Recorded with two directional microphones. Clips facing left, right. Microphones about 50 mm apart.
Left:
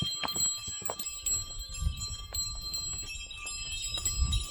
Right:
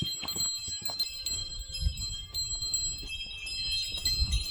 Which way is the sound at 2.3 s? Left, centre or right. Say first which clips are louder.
Right 3 dB; left.